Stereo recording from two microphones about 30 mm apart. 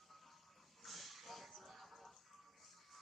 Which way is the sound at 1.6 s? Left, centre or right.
Centre.